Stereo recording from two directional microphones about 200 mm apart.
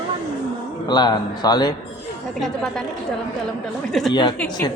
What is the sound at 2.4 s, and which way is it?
Speech, centre (ahead or behind).